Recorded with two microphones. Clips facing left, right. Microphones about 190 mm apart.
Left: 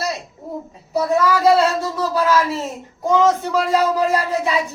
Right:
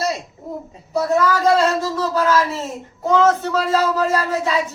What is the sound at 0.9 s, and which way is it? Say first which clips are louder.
A man's voice: even; 10° left (ahead or behind).